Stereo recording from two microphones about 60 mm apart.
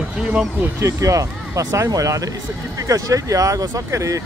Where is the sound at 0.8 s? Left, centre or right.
Right.